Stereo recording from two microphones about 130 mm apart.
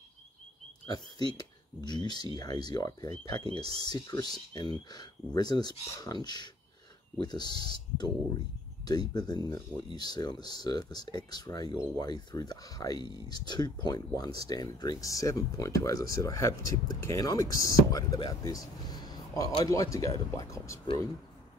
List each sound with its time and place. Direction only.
0.8 s speech: 35° left (ahead or behind)